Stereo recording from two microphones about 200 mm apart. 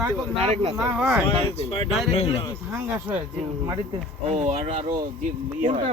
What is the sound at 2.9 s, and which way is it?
Speech, 10° right (ahead or behind).